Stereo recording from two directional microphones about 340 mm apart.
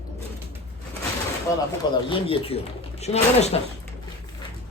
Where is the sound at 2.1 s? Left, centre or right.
Centre.